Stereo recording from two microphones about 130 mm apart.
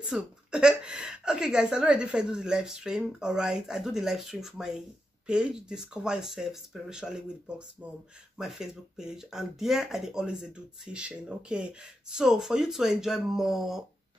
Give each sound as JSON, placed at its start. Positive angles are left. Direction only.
{"t": 0.1, "sound": "a woman's voice", "side_deg": -5}